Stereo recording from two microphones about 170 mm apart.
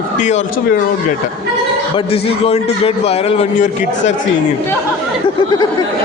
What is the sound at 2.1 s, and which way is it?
A man's voice, 35° left (ahead or behind).